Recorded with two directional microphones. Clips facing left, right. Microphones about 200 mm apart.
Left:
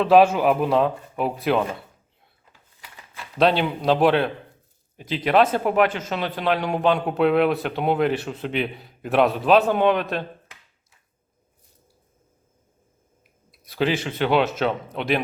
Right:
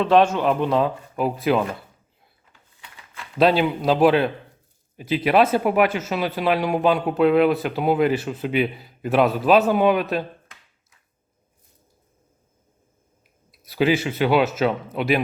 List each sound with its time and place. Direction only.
0.0 s speech: 5° left (ahead or behind)
3.3 s speech: 5° right (ahead or behind)
13.5 s speech: 5° right (ahead or behind)